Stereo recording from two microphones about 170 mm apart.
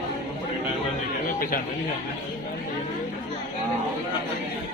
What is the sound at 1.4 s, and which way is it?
Speech, 60° left (ahead or behind).